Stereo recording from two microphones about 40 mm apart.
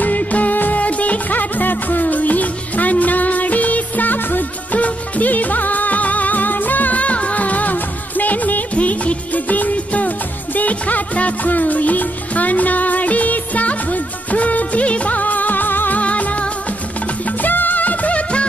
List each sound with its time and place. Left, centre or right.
0.0 s music: left
16.0 s music: left
17.4 s music: left